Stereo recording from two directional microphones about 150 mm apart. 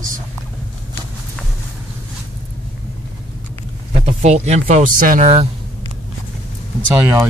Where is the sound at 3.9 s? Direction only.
45° right (ahead or behind); by 5.2 s 65° right (ahead or behind).